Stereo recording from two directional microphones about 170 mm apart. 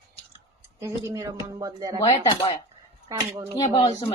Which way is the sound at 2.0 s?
35° left (ahead or behind).